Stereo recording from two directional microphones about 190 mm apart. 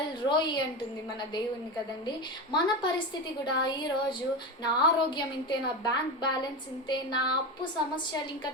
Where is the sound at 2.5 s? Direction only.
20° left (ahead or behind).